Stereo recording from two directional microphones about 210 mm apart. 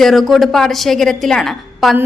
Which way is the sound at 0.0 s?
Centre (ahead or behind).